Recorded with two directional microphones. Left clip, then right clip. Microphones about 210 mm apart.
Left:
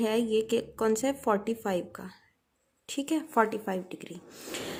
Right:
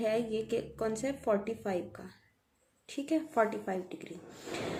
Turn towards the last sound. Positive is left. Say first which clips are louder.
# left 3 dB
turn(degrees=45)  # may be behind; listen again after turning